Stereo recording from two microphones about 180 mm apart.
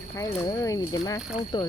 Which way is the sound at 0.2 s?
20° left (ahead or behind).